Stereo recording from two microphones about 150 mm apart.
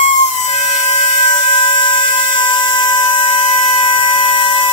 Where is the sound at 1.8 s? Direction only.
35° left (ahead or behind).